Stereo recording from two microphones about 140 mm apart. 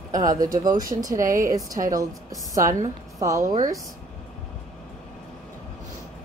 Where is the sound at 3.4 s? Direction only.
65° right (ahead or behind).